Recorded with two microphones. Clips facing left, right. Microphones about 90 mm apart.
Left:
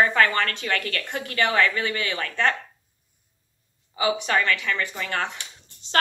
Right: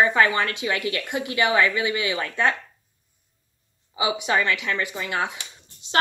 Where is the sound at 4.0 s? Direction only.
15° right (ahead or behind).